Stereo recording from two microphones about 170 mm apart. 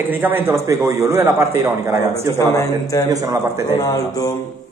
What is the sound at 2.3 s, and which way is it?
Speech, 20° left (ahead or behind).